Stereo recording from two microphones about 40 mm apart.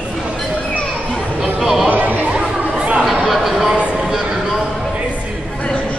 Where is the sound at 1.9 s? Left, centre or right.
Right.